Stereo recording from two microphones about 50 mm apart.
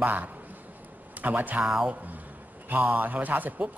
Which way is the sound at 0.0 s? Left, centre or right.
Right.